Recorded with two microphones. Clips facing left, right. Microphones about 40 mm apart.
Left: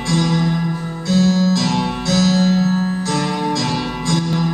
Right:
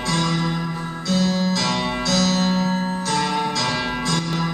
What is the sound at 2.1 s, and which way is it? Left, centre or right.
Music, left.